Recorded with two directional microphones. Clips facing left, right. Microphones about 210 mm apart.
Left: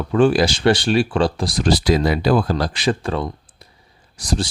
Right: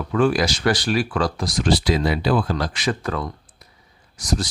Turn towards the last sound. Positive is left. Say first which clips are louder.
# left 2 dB
turn(degrees=30)  # may be behind; listen again after turning